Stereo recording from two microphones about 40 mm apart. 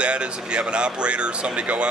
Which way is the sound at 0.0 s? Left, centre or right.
Right.